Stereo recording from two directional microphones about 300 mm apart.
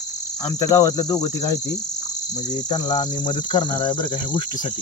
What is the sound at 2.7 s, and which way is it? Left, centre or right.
Cricket, centre.